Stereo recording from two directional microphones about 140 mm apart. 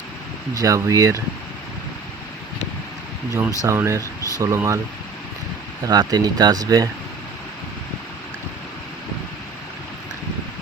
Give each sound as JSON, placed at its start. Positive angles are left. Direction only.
{"t": 0.5, "sound": "speech", "side_deg": -25}
{"t": 3.6, "sound": "speech", "side_deg": -20}
{"t": 5.8, "sound": "speech", "side_deg": -30}